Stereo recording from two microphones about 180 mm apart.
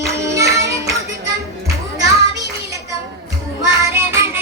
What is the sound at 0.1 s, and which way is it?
Music, 15° right (ahead or behind).